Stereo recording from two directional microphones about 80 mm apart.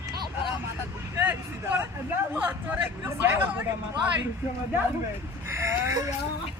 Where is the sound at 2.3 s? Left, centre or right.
Centre.